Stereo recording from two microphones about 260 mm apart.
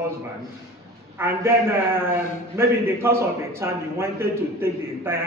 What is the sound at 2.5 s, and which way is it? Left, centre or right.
A man's voice, centre.